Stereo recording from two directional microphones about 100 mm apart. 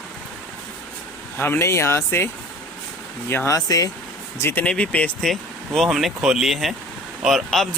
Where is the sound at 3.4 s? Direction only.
35° left (ahead or behind).